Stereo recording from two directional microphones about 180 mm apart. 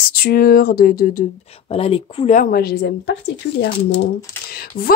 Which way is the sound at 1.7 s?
30° left (ahead or behind).